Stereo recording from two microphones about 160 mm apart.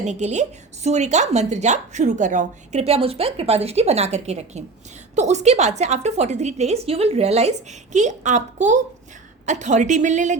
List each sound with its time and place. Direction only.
0.0 s a woman's voice: 45° right (ahead or behind)